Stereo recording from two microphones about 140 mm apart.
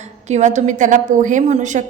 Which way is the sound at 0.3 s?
55° right (ahead or behind).